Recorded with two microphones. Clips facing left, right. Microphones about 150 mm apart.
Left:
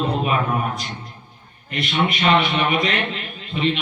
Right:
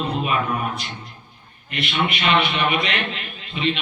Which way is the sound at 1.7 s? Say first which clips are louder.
Left 2 dB; 40° left (ahead or behind).